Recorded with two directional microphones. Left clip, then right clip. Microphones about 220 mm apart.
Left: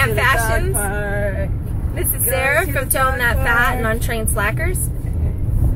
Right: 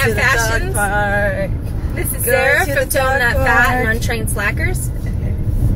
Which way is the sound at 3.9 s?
25° left (ahead or behind).